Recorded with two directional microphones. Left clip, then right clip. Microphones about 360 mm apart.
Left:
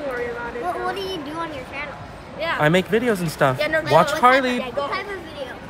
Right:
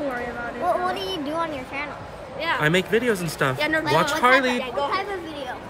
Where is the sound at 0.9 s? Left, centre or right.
Right.